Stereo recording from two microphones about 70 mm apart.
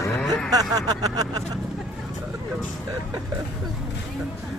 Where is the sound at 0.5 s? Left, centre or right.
Right.